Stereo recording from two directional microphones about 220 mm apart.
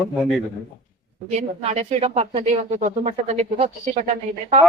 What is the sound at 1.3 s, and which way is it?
Speech, 30° right (ahead or behind).